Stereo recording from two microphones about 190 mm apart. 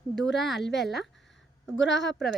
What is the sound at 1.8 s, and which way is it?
Speech, 70° left (ahead or behind).